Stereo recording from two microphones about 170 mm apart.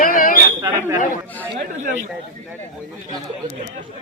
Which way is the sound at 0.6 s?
15° right (ahead or behind).